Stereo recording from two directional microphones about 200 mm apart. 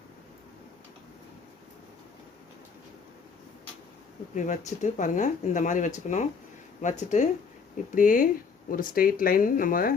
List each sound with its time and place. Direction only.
4.4 s speech: 40° left (ahead or behind)